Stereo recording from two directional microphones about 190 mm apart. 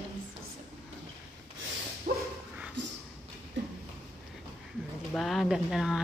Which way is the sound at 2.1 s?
50° right (ahead or behind).